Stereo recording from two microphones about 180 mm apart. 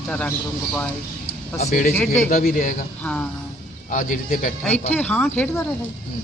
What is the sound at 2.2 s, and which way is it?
Speech, 50° left (ahead or behind).